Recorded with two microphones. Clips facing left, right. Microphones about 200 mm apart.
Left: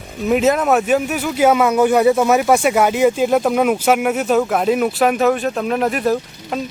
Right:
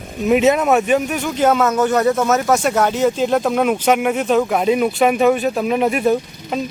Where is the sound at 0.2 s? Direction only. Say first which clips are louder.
Right 1 dB; centre (ahead or behind).